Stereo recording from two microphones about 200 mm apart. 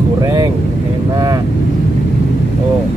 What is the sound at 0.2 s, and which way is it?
Vehicle, 15° right (ahead or behind).